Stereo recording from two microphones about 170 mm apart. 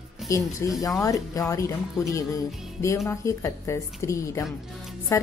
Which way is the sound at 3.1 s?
15° left (ahead or behind).